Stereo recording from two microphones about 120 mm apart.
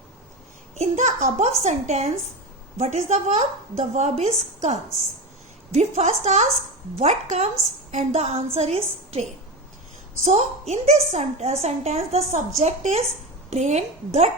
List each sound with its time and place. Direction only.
0.8 s a sound: 75° right (ahead or behind)
1.6 s a woman's voice: 65° right (ahead or behind)
10.2 s a woman's voice: 65° right (ahead or behind)